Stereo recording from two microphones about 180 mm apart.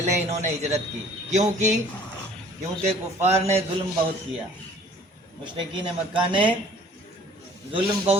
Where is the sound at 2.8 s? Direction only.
35° right (ahead or behind).